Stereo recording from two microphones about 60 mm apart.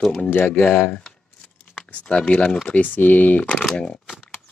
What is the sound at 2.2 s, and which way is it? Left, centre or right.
Speech, centre.